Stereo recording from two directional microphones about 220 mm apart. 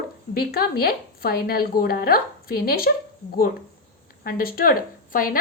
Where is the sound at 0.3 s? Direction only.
45° left (ahead or behind).